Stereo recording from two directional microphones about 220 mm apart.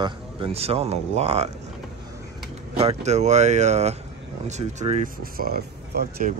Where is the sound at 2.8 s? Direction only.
30° right (ahead or behind).